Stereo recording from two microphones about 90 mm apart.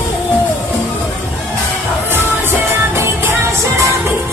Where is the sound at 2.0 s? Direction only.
25° right (ahead or behind).